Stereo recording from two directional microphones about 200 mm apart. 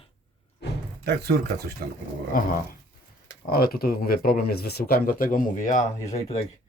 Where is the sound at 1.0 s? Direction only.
55° right (ahead or behind).